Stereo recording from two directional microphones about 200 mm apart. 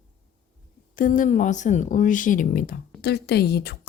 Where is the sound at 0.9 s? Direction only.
40° left (ahead or behind).